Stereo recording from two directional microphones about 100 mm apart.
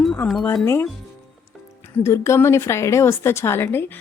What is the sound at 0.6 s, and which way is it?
Speech, 25° left (ahead or behind).